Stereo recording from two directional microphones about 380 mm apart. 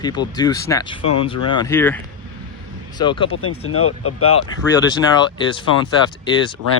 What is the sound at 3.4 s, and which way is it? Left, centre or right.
Speech, left.